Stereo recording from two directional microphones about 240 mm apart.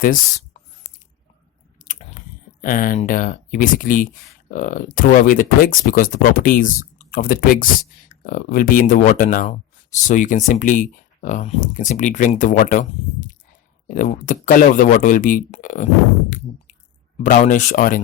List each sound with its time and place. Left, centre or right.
1.8 s a sound: left
2.6 s speech: left
17.2 s speech: left